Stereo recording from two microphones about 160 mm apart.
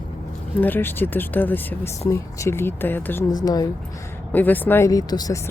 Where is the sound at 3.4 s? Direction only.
25° left (ahead or behind).